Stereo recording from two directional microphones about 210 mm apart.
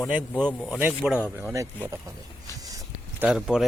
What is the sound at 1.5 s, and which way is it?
Speech, 15° right (ahead or behind).